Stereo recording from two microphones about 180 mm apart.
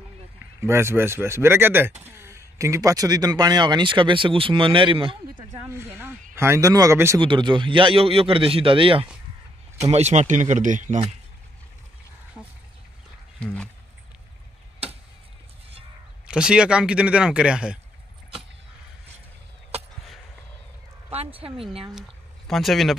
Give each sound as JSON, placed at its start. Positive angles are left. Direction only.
{"t": 0.6, "sound": "speech", "side_deg": -15}
{"t": 5.5, "sound": "speech", "side_deg": -15}
{"t": 7.2, "sound": "speech", "side_deg": -25}
{"t": 9.9, "sound": "speech", "side_deg": -40}
{"t": 13.4, "sound": "speech", "side_deg": 5}
{"t": 16.3, "sound": "speech", "side_deg": -5}
{"t": 21.1, "sound": "speech", "side_deg": -30}
{"t": 21.9, "sound": "speech", "side_deg": 0}